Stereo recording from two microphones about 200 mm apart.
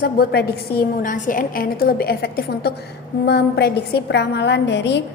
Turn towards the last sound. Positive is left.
turn(degrees=60)  # may be behind; listen again after turning